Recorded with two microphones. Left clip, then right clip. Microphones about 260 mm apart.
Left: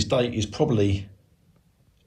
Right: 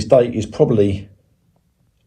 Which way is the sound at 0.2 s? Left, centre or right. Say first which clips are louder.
Right 9 dB; centre.